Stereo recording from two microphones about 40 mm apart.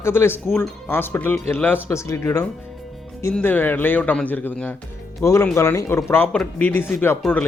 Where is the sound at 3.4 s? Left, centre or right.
Left.